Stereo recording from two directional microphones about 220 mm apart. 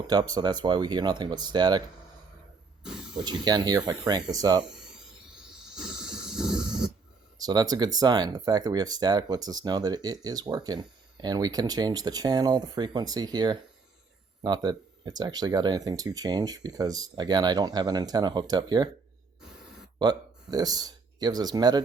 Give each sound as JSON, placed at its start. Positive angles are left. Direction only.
{"t": 0.1, "sound": "speech", "side_deg": -20}
{"t": 3.2, "sound": "speech", "side_deg": -20}
{"t": 5.7, "sound": "a sound", "side_deg": -5}
{"t": 7.3, "sound": "speech", "side_deg": -15}
{"t": 20.0, "sound": "speech", "side_deg": -15}